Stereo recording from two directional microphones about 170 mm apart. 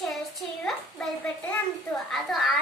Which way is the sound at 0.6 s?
5° left (ahead or behind).